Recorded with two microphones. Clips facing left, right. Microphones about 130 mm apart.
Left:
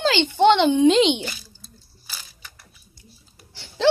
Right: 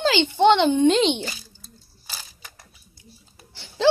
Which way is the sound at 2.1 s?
35° right (ahead or behind).